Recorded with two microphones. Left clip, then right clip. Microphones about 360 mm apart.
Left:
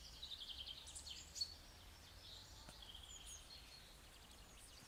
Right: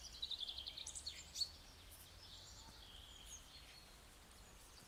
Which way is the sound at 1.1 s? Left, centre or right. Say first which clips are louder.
Right 1 dB; centre.